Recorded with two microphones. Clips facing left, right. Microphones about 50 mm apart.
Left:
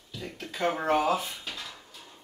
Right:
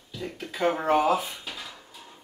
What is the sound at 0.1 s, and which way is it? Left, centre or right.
Drawer open or close, centre.